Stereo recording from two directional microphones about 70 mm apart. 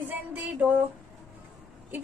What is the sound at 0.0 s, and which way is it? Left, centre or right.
Music, right.